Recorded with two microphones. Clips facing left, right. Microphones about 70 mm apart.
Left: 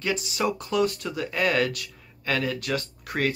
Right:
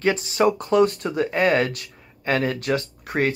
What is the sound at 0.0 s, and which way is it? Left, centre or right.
Speech, right.